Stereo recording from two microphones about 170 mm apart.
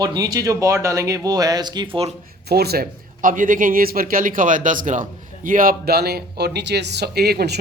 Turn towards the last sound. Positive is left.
turn(degrees=-70)  # may be behind; listen again after turning